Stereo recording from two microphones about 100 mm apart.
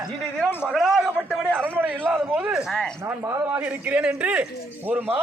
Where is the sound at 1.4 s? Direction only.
20° right (ahead or behind).